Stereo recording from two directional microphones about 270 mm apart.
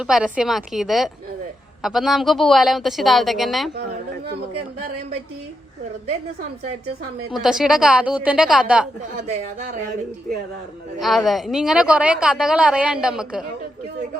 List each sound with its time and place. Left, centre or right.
0.0 s a woman's voice: centre
7.3 s a woman's voice: centre
11.0 s a woman's voice: centre